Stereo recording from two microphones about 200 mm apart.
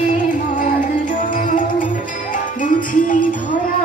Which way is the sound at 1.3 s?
40° left (ahead or behind).